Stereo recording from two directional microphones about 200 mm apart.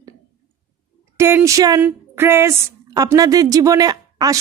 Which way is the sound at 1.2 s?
15° right (ahead or behind).